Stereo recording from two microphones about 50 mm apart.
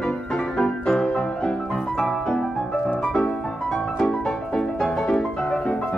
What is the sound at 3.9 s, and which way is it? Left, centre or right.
Music, centre.